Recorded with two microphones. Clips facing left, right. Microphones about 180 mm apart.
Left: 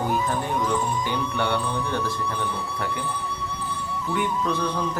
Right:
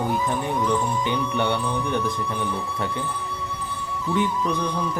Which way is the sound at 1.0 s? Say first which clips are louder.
Right 2 dB; 20° right (ahead or behind).